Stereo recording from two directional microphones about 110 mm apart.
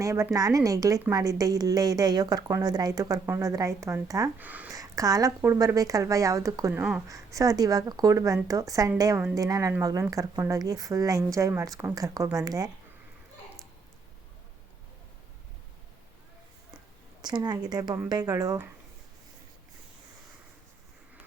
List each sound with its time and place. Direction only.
0.0 s a woman's voice: 30° right (ahead or behind)
4.4 s speech: 15° right (ahead or behind)
4.7 s a sound: 30° right (ahead or behind)
5.4 s a woman's voice: 25° right (ahead or behind)
17.2 s a woman's voice: 40° right (ahead or behind)